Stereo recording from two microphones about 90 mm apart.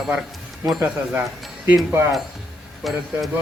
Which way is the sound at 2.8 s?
Centre (ahead or behind).